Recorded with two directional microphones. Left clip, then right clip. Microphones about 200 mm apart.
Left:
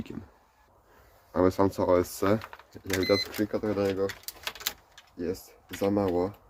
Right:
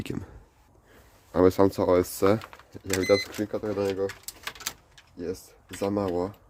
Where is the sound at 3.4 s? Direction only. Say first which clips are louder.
Even; 15° right (ahead or behind).